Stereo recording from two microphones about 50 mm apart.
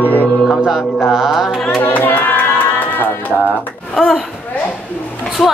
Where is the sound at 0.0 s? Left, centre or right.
Left.